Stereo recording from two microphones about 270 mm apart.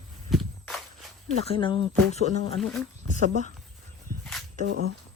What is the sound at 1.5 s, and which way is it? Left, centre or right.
Speech, centre.